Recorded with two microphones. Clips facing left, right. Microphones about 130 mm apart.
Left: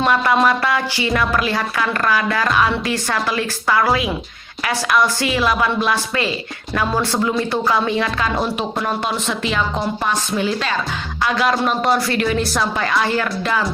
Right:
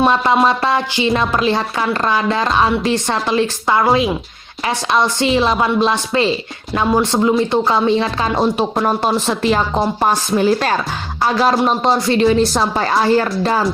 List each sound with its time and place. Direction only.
0.4 s a woman's voice: 25° right (ahead or behind)